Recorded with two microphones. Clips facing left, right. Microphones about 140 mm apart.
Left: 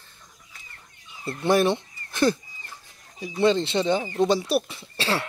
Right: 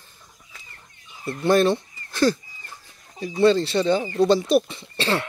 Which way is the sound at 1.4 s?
15° left (ahead or behind).